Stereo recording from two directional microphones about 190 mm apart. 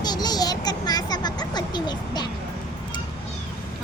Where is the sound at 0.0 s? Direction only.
20° left (ahead or behind).